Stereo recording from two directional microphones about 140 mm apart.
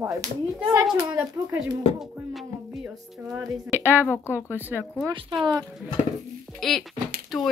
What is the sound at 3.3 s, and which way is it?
Speech, 15° right (ahead or behind).